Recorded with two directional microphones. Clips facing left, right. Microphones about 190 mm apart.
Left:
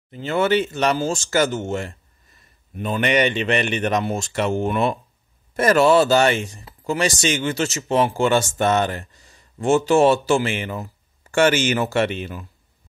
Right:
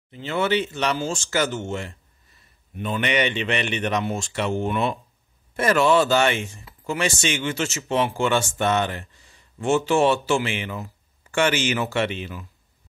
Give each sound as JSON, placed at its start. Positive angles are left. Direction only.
{"t": 0.1, "sound": "speech", "side_deg": 45}